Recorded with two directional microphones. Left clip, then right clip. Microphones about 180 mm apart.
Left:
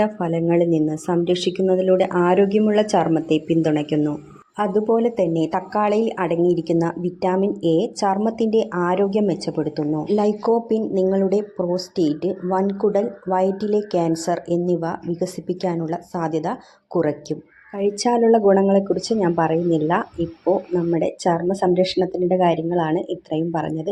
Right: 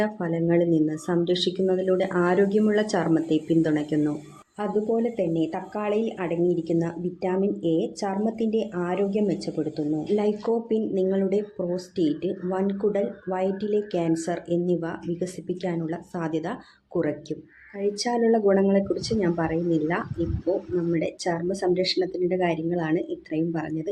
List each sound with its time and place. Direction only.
0.0 s speech: 15° left (ahead or behind)